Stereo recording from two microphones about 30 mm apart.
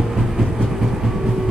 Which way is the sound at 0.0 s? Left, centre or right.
Centre.